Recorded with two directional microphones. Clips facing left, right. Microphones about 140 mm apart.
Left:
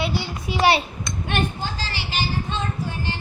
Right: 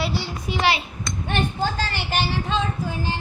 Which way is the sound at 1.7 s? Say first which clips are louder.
Right 4 dB; 55° right (ahead or behind).